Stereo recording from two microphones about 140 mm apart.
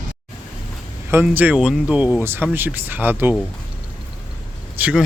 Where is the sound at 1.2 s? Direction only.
10° right (ahead or behind).